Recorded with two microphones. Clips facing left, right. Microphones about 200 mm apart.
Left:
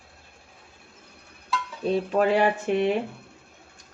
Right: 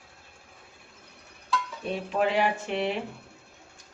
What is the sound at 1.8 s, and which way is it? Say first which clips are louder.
Speech: left 6 dB; 45° left (ahead or behind).